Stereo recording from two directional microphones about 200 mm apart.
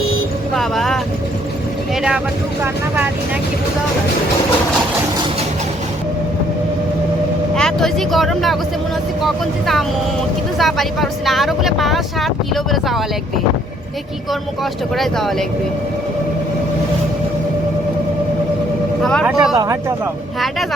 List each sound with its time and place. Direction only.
0.5 s vehicle: centre (ahead or behind)
2.0 s speech: 5° right (ahead or behind)
7.5 s speech: centre (ahead or behind)
14.9 s speech: centre (ahead or behind)
19.0 s speech: centre (ahead or behind)
19.5 s speech: 15° right (ahead or behind)